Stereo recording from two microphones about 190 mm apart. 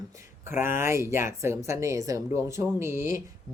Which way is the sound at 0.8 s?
15° right (ahead or behind).